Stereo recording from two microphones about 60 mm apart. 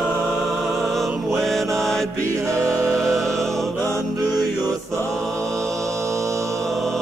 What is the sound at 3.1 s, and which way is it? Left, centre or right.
Music, centre.